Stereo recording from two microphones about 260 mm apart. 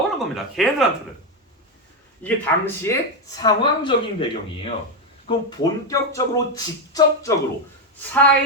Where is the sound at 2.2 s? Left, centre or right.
Centre.